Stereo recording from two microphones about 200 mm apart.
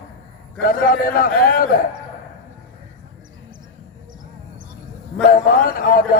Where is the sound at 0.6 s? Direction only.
45° left (ahead or behind).